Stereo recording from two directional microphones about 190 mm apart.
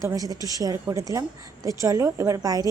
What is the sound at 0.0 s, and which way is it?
A woman's voice, 20° right (ahead or behind).